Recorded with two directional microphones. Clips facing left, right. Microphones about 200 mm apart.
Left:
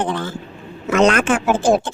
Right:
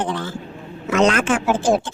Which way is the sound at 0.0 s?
55° left (ahead or behind).